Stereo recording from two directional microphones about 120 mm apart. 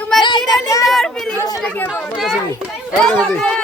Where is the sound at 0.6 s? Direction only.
30° left (ahead or behind).